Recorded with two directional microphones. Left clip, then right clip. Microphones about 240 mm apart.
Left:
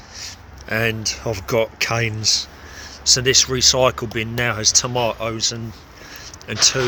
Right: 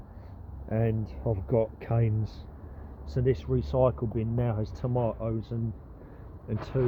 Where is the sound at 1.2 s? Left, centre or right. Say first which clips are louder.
Left 7 dB; left.